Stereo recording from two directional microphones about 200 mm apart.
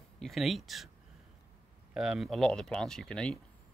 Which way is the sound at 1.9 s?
5° right (ahead or behind).